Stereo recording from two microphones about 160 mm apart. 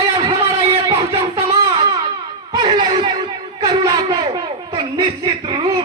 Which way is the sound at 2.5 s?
30° right (ahead or behind).